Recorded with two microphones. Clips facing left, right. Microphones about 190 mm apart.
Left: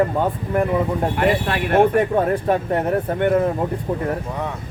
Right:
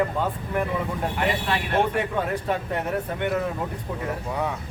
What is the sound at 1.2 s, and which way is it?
Speech, 55° left (ahead or behind).